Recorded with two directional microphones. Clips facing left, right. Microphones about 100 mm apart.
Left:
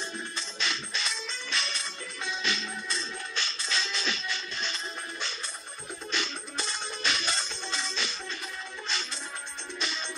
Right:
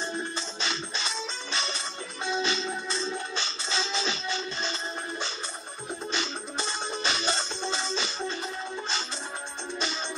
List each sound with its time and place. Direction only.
0.4 s music: 30° right (ahead or behind)
6.1 s music: 30° right (ahead or behind)